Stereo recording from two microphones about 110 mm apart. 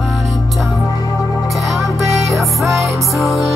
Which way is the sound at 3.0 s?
Centre (ahead or behind).